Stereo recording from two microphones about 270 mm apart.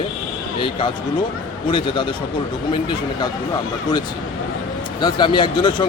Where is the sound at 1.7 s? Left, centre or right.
Centre.